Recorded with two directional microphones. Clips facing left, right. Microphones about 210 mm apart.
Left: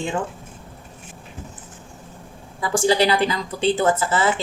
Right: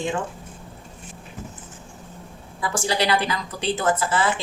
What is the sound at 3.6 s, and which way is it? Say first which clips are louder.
Speech: left 4 dB; 30° left (ahead or behind).